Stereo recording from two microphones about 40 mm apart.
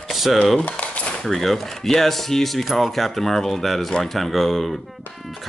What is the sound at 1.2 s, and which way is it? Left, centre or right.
Speech, centre.